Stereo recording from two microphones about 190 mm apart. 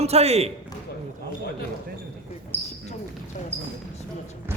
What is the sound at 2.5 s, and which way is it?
Basketball bounce, 10° left (ahead or behind).